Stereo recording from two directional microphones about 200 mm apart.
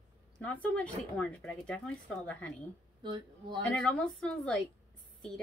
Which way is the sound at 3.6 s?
5° left (ahead or behind).